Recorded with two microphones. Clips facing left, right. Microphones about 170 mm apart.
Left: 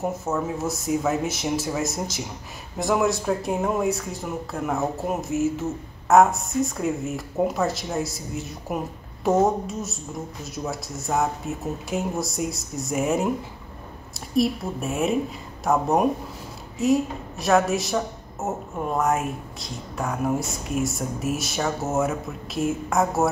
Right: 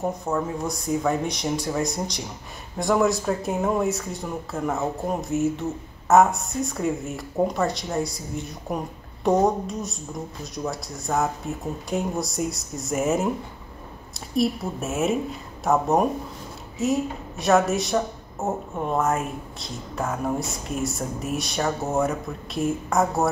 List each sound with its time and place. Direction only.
0.1 s a woman's voice: 5° left (ahead or behind)